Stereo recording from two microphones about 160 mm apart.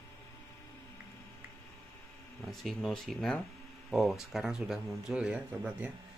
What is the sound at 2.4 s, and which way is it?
Speech, centre (ahead or behind).